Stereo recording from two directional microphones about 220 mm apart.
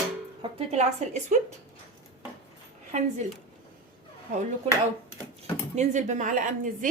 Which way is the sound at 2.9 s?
30° right (ahead or behind).